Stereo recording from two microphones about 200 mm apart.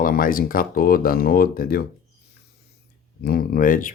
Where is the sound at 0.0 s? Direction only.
45° left (ahead or behind).